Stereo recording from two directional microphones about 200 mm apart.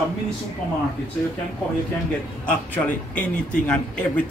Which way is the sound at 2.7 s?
5° left (ahead or behind).